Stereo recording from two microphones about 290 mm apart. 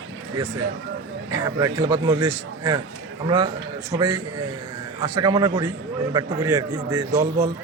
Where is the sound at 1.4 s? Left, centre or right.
Centre.